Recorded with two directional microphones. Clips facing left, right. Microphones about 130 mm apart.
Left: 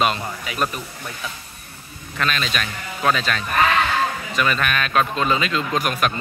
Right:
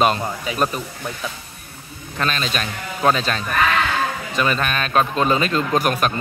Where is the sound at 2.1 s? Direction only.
35° right (ahead or behind).